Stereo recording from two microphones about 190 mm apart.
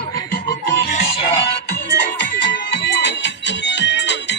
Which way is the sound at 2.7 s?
65° left (ahead or behind).